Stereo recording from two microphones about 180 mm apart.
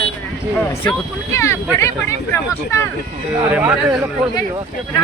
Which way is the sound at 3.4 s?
10° right (ahead or behind).